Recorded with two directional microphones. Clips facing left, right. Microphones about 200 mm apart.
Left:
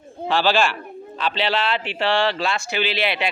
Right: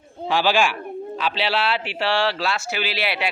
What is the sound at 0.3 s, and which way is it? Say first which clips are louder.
Speech: even; 10° right (ahead or behind).